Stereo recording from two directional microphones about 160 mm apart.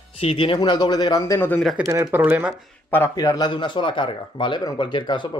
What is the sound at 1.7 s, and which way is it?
Speech, 15° right (ahead or behind).